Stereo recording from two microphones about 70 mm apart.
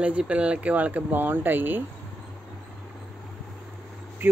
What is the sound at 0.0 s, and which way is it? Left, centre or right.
Speech, centre.